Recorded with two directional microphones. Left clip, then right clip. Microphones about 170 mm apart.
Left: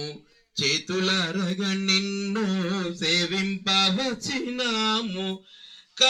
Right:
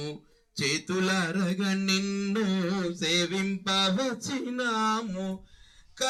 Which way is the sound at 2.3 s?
20° left (ahead or behind).